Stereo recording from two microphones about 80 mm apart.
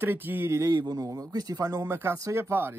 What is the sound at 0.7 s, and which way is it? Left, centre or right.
A man's voice, right.